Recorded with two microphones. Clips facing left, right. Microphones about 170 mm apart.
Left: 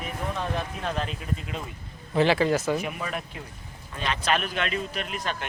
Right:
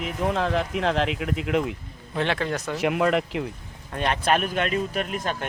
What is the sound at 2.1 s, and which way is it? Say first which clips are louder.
Speech: left 4 dB; 5° left (ahead or behind).